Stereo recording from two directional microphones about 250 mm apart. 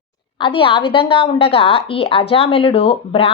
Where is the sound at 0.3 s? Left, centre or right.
Centre.